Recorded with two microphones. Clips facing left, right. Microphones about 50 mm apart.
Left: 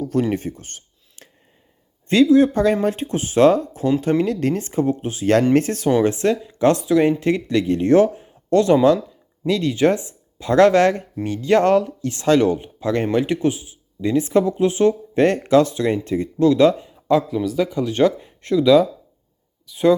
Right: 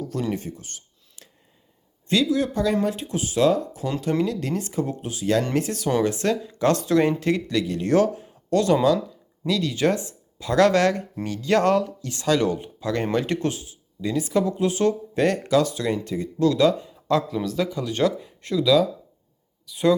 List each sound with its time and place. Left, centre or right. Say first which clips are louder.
0.0 s speech: left 7 dB; left
6.0 s speech: left 4 dB; left
6.8 s speech: left 3 dB; centre
7.2 s speech: left 4 dB; left
13.1 s speech: left 5 dB; centre
14.0 s speech: left 5 dB; left
16.9 s a sound: left 5 dB; centre
17.2 s speech: left 4 dB; centre
17.7 s speech: left 5 dB; left